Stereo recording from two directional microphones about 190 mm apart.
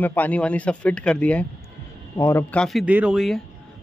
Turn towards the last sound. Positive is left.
turn(degrees=0)  # may be behind; listen again after turning